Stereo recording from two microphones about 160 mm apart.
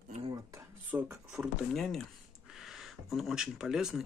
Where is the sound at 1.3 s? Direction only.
Centre (ahead or behind).